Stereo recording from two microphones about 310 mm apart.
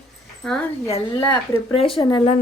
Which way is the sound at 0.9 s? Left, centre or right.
Centre.